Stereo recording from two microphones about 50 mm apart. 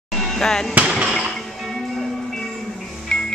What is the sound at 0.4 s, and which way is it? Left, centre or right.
Speech, centre.